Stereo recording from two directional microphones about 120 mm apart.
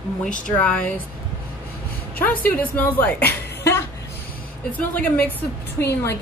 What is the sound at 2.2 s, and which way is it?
A woman's voice, 15° left (ahead or behind).